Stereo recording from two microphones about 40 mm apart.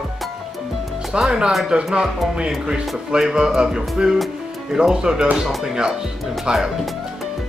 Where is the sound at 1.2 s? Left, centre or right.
Right.